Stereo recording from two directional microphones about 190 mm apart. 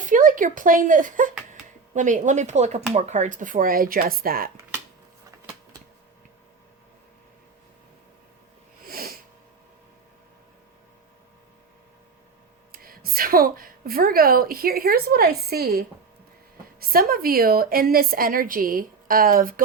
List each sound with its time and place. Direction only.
0.0 s a woman's voice: 45° right (ahead or behind)
8.8 s a sound: 50° right (ahead or behind)
12.7 s a woman's voice: 50° right (ahead or behind)
16.9 s a woman's voice: 50° right (ahead or behind)